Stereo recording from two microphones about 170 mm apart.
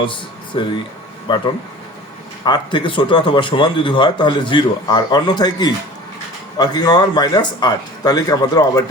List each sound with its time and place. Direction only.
0.0 s speech: 30° left (ahead or behind)